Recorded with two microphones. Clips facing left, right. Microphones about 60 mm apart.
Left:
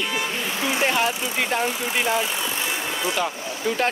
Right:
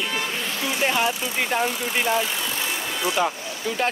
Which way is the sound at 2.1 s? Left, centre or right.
Left.